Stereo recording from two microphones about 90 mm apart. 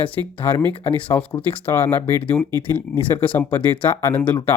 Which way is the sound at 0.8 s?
85° left.